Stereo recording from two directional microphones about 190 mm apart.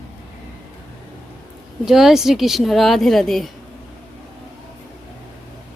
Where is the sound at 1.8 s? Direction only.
Centre (ahead or behind).